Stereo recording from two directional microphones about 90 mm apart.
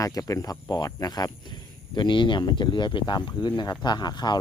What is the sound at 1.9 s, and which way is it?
Speech, 60° left (ahead or behind).